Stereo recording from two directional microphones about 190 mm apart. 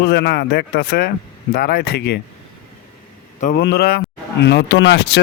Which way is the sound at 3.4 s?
45° left (ahead or behind).